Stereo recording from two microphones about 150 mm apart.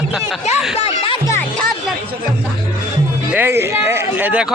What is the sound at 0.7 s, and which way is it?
Music, 40° left (ahead or behind).